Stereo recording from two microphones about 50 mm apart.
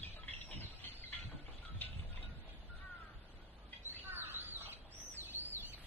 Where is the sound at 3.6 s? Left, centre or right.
Left.